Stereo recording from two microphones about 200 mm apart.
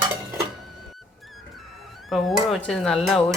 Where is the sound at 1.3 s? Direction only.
Centre (ahead or behind).